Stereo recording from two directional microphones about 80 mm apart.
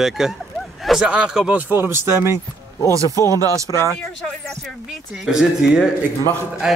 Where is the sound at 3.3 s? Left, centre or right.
Right.